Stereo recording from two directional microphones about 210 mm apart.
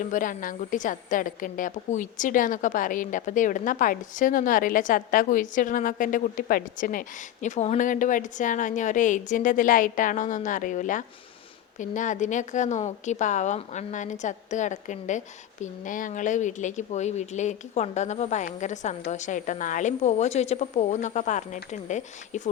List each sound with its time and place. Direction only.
0.0 s a woman's voice: 40° left (ahead or behind)